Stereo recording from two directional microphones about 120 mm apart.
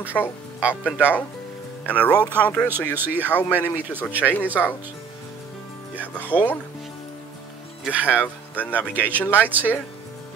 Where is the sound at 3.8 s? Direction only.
15° right (ahead or behind).